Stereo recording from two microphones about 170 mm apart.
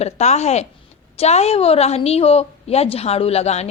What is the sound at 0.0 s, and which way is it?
A woman's voice, 40° left (ahead or behind).